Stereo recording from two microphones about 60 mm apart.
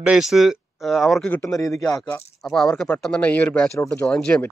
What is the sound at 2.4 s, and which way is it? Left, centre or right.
Speech, centre.